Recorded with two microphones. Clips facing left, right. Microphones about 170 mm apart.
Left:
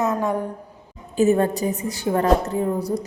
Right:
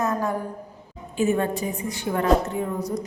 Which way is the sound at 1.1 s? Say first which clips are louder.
Left 5 dB; 40° left (ahead or behind).